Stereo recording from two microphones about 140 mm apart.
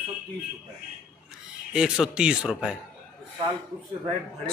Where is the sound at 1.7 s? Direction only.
5° right (ahead or behind).